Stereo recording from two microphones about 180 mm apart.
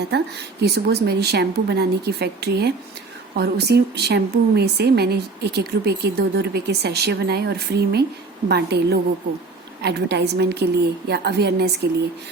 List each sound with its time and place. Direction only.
0.1 s a woman's voice: 65° right (ahead or behind)